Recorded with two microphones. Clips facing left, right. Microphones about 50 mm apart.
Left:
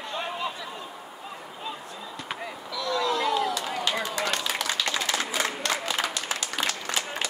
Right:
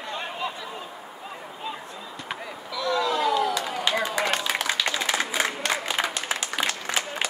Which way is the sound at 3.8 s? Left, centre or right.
Right.